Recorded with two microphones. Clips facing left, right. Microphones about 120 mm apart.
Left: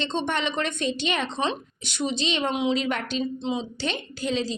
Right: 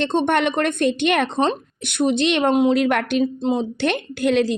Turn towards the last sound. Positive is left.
turn(degrees=-60)  # may be behind; listen again after turning